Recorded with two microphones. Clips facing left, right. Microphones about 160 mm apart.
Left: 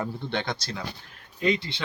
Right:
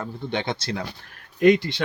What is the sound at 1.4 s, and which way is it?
Speech, 65° right (ahead or behind).